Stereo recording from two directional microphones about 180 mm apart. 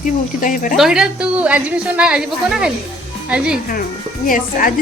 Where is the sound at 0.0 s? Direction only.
50° left (ahead or behind).